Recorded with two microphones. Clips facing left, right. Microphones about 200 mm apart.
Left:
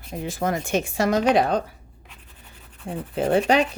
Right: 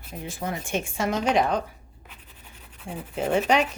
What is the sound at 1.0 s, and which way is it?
Speech, 40° left (ahead or behind).